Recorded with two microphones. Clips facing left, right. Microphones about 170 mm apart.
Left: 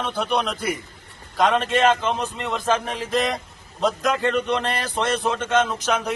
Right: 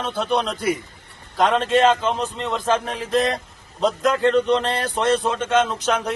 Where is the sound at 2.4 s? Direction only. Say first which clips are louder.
Right 2 dB; 5° left (ahead or behind).